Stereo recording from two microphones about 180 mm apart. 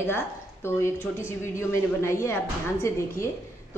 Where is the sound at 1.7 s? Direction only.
15° left (ahead or behind).